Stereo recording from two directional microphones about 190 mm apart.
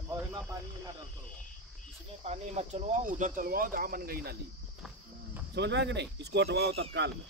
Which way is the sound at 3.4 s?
45° right (ahead or behind).